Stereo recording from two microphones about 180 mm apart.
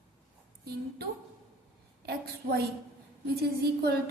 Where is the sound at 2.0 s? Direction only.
60° right (ahead or behind).